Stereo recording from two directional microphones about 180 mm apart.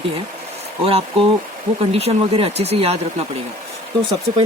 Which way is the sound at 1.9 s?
35° right (ahead or behind).